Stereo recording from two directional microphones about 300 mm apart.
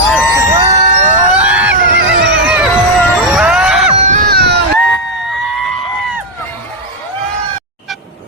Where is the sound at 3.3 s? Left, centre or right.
Centre.